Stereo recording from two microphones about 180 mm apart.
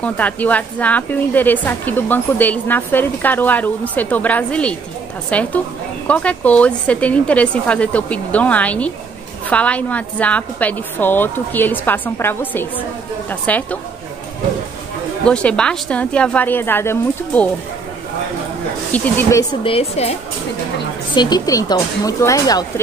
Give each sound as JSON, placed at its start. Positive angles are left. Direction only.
{"t": 0.0, "sound": "a woman's voice", "side_deg": 10}
{"t": 15.2, "sound": "a woman's voice", "side_deg": 5}
{"t": 18.9, "sound": "a woman's voice", "side_deg": 10}
{"t": 19.6, "sound": "speech", "side_deg": 35}
{"t": 21.1, "sound": "speech", "side_deg": 25}